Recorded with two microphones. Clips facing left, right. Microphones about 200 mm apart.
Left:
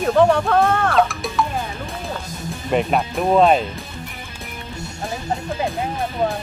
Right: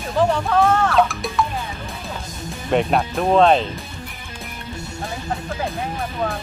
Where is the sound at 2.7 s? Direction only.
Centre (ahead or behind).